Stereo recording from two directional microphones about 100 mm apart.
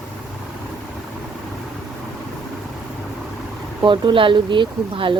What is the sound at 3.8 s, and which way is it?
Speech, 55° right (ahead or behind).